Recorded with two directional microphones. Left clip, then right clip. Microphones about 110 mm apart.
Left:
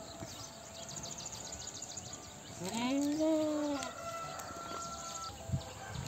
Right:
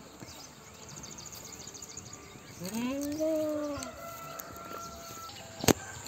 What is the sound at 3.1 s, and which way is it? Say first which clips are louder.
Cat: right 4 dB; 50° left (ahead or behind).